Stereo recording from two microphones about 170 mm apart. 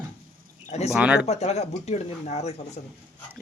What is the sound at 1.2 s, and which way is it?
Speech, 40° left (ahead or behind).